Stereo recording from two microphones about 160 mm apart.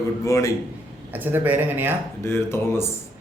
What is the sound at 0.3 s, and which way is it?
Speech, 20° left (ahead or behind).